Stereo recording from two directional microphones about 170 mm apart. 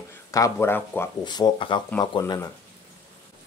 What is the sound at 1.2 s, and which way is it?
A man's voice, 25° left (ahead or behind).